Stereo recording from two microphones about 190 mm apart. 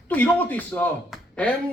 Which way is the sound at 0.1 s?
10° left (ahead or behind).